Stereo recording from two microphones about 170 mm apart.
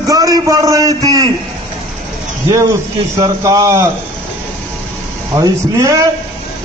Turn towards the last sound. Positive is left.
turn(degrees=-20)  # may be behind; listen again after turning